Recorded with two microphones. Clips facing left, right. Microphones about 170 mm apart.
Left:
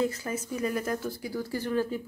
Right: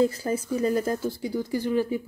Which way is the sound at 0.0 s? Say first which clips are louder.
Right 6 dB; 30° right (ahead or behind).